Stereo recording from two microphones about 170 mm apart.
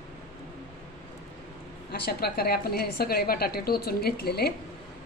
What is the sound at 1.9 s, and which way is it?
A woman's voice, 65° left (ahead or behind).